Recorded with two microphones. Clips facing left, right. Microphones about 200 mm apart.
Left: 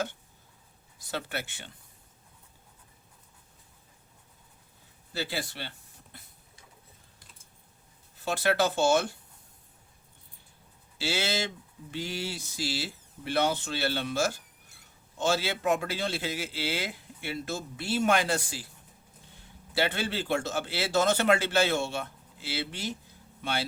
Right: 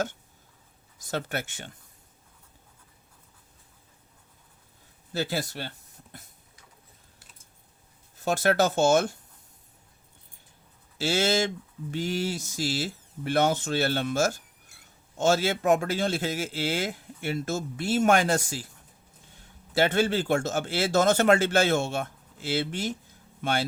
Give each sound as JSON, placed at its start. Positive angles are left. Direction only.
{"t": 0.9, "sound": "speech", "side_deg": -45}
{"t": 5.1, "sound": "speech", "side_deg": -45}
{"t": 8.2, "sound": "speech", "side_deg": -45}
{"t": 10.9, "sound": "speech", "side_deg": -45}
{"t": 19.7, "sound": "speech", "side_deg": -45}